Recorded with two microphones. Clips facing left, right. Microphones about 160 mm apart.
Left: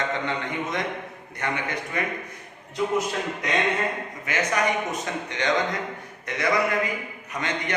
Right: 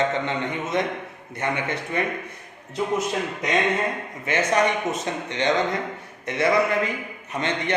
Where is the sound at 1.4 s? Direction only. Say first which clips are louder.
Right 2 dB; 20° right (ahead or behind).